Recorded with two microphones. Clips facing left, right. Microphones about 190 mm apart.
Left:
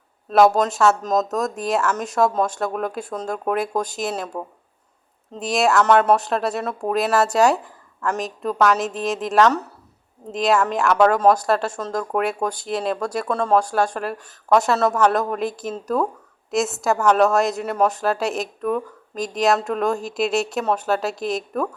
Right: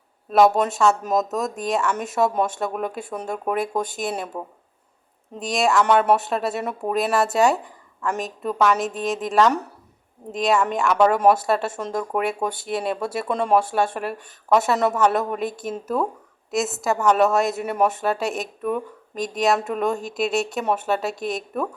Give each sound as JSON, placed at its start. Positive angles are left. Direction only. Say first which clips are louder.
{"t": 0.3, "sound": "speech", "louder": "left 1 dB", "side_deg": 0}
{"t": 5.8, "sound": "speech", "louder": "left 2 dB", "side_deg": -10}
{"t": 6.6, "sound": "speech", "louder": "left 1 dB", "side_deg": -15}
{"t": 6.9, "sound": "a woman's voice", "louder": "left 2 dB", "side_deg": 0}
{"t": 9.5, "sound": "speech", "louder": "left 1 dB", "side_deg": -10}
{"t": 10.3, "sound": "speech", "louder": "left 1 dB", "side_deg": 0}
{"t": 11.0, "sound": "speech", "louder": "left 1 dB", "side_deg": -10}
{"t": 13.2, "sound": "speech", "louder": "even", "side_deg": -15}
{"t": 13.6, "sound": "speech", "louder": "left 1 dB", "side_deg": -5}